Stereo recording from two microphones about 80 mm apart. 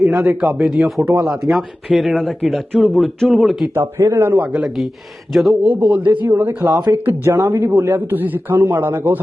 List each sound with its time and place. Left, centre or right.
0.2 s speech: centre
3.8 s a man's voice: right
4.4 s speech: centre
5.6 s speech: centre
6.2 s speech: right
6.7 s speech: right
7.0 s speech: right